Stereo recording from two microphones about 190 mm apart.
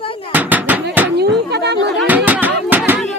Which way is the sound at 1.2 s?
60° right (ahead or behind).